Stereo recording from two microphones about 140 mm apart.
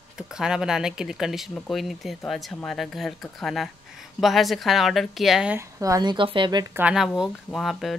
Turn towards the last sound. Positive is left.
turn(degrees=0)  # may be behind; listen again after turning